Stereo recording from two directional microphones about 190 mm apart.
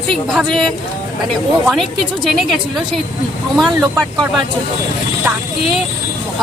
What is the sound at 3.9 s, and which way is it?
Speech, 5° left (ahead or behind).